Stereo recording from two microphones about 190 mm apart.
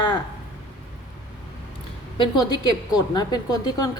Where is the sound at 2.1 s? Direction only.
25° left (ahead or behind).